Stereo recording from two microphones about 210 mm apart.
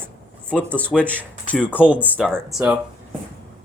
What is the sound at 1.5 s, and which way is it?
Speech, 5° left (ahead or behind).